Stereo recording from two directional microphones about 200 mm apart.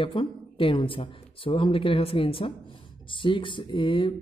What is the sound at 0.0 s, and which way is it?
Speech, 25° left (ahead or behind).